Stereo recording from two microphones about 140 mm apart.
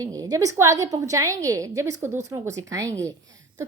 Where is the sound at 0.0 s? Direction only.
25° right (ahead or behind).